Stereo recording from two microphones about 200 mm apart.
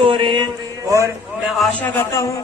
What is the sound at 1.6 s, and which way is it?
Speech, 10° left (ahead or behind).